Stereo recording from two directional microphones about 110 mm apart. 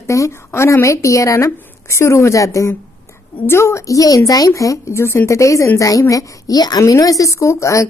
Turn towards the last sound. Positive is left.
turn(degrees=30)  # may be behind; listen again after turning